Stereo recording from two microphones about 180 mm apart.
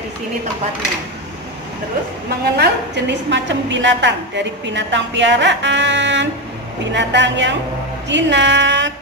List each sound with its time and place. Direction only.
2.6 s a woman's voice: 75° right (ahead or behind)